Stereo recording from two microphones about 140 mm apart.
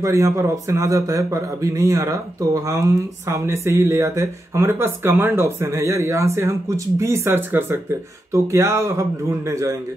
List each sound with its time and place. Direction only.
0.0 s speech: 20° right (ahead or behind)